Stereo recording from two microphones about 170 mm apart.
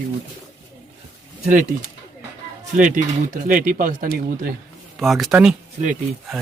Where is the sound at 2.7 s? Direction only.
50° right (ahead or behind).